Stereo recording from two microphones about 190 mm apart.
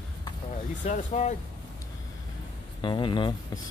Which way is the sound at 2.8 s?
25° left (ahead or behind).